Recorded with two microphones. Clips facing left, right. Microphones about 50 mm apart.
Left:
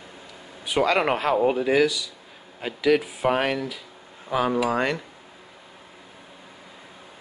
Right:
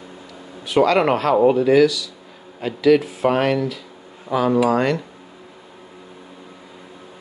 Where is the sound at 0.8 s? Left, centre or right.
Centre.